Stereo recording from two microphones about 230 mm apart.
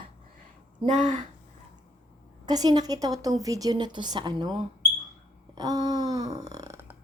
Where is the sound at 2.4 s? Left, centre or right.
Centre.